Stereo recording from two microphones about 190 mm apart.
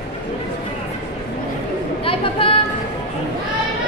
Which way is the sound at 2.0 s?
30° left (ahead or behind).